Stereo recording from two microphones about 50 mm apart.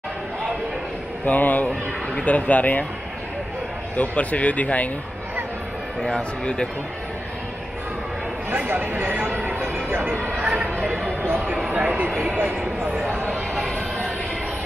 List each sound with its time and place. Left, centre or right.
1.2 s speech: left
3.9 s speech: left
6.0 s speech: centre
8.5 s speech: right
9.6 s music: right
10.1 s chatter: right
11.7 s a sound: right
12.3 s speech: right